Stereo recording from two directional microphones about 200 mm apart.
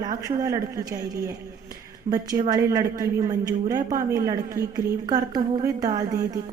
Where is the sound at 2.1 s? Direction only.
30° right (ahead or behind).